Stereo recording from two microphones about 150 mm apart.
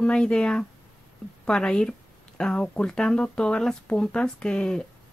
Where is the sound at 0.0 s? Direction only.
5° left (ahead or behind).